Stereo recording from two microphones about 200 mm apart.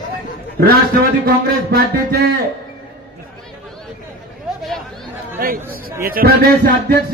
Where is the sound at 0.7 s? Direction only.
45° right (ahead or behind).